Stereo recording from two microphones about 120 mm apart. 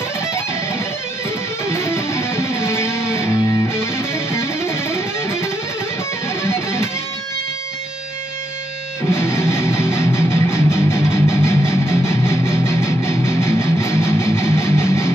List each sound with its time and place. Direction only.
1.7 s music: 20° left (ahead or behind)
9.1 s music: 20° left (ahead or behind)